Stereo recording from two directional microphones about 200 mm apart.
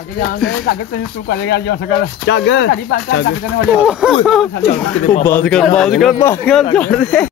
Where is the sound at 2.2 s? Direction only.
65° left (ahead or behind).